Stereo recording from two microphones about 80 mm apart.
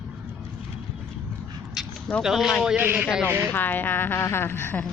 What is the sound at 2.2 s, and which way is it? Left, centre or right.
Speech, centre.